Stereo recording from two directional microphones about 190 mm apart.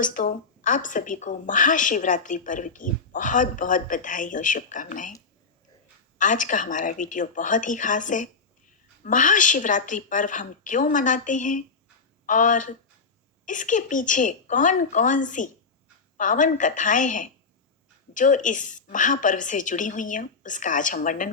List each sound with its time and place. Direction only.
0.0 s a woman's voice: 45° left (ahead or behind)
6.1 s a woman's voice: 40° left (ahead or behind)